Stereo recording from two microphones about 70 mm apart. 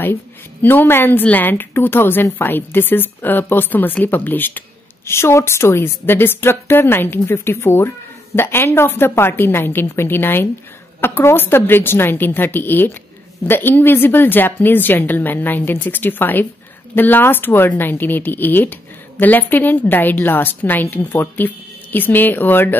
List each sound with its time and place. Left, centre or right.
0.0 s a woman's voice: left
5.0 s a woman's voice: left